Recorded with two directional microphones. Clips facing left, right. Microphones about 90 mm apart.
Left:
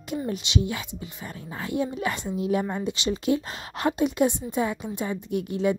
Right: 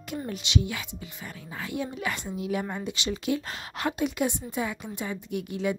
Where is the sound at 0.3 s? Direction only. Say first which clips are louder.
Left 1 dB; 25° left (ahead or behind).